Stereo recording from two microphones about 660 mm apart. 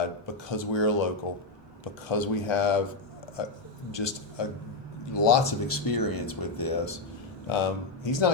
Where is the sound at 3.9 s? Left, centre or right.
Left.